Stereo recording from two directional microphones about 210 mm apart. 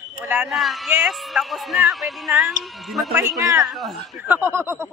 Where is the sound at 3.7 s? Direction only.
Centre (ahead or behind).